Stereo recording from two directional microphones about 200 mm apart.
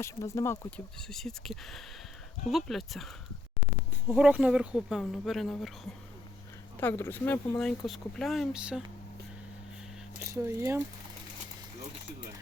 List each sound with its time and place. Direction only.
0.0 s speech: 15° left (ahead or behind)
0.9 s speech: centre (ahead or behind)
4.1 s speech: 5° right (ahead or behind)
10.3 s speech: 15° right (ahead or behind)